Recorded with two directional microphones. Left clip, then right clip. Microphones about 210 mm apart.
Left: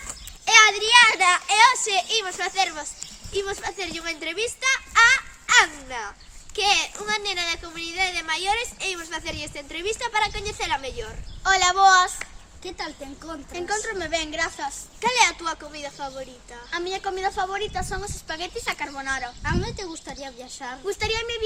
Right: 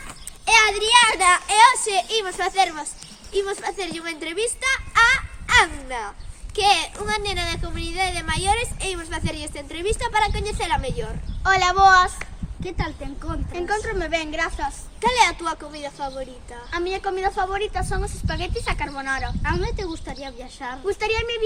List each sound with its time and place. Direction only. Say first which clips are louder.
0.4 s a child's voice: left 1 dB; 20° right (ahead or behind)
11.4 s speech: right 2 dB; 5° left (ahead or behind)
12.6 s speech: right 3 dB; 15° left (ahead or behind)
13.5 s speech: right 3 dB; 10° left (ahead or behind)
15.0 s a woman's voice: right 2 dB; 5° right (ahead or behind)
19.4 s speech: right 3 dB; 20° left (ahead or behind)
20.9 s speech: right 3 dB; 5° left (ahead or behind)